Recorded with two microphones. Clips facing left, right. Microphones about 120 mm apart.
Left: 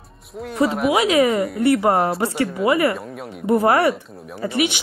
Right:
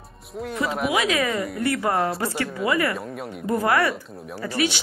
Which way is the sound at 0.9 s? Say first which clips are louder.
Left 7 dB; 30° left (ahead or behind).